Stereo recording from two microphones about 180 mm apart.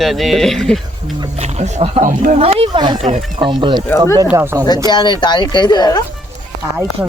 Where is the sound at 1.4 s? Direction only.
40° right (ahead or behind).